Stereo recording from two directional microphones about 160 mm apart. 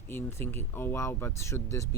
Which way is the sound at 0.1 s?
15° left (ahead or behind).